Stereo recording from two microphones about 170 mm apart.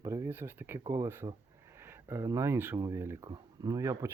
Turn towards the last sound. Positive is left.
turn(degrees=-15)  # may be behind; listen again after turning